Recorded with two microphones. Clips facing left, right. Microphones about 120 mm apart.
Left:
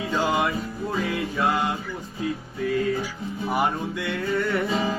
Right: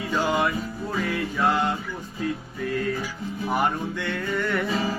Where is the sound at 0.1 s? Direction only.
15° left (ahead or behind).